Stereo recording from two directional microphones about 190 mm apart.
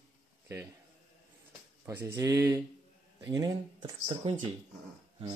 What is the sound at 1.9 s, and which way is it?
Speech, 15° right (ahead or behind).